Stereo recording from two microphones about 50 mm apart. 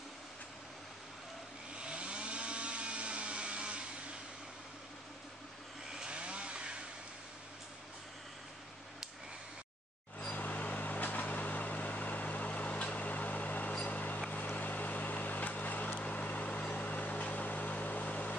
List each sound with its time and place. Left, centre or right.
1.8 s chainsaw: right
5.9 s chainsaw: centre
10.3 s vehicle: left
13.8 s a sound: left
14.3 s vehicle: left